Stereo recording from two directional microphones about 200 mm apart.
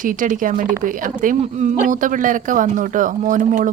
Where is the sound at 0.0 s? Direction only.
40° right (ahead or behind).